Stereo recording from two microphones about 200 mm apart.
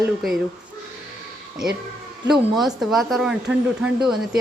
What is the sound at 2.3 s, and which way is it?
Speech, centre (ahead or behind).